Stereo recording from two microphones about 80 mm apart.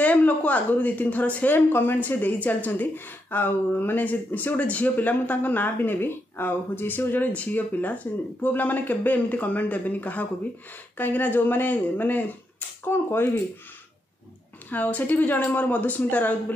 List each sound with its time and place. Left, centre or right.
0.0 s speech: centre
14.7 s speech: centre